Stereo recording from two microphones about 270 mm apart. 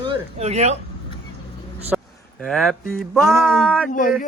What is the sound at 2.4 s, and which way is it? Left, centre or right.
Speech, centre.